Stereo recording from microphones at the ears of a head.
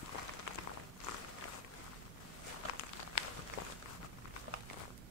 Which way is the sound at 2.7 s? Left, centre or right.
Left.